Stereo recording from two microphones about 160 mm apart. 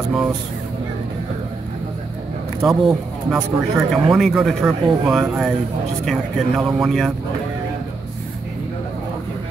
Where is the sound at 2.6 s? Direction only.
Centre (ahead or behind).